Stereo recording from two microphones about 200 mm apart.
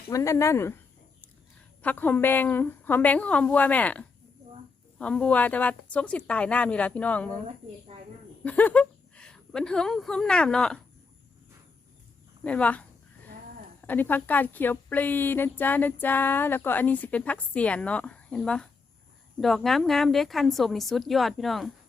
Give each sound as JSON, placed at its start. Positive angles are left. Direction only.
{"t": 0.1, "sound": "a woman's voice", "side_deg": 15}
{"t": 1.8, "sound": "a woman's voice", "side_deg": 10}
{"t": 7.9, "sound": "speech", "side_deg": -30}
{"t": 8.4, "sound": "a woman's voice", "side_deg": 5}
{"t": 12.4, "sound": "speech", "side_deg": 5}
{"t": 13.8, "sound": "a woman's voice", "side_deg": 10}